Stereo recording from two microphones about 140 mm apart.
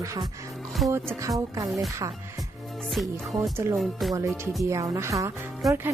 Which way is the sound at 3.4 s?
20° right (ahead or behind).